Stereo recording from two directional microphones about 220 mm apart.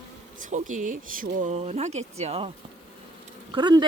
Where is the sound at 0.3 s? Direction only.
35° right (ahead or behind).